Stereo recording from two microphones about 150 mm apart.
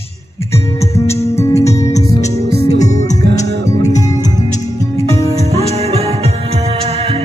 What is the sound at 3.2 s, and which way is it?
Music, 90° right.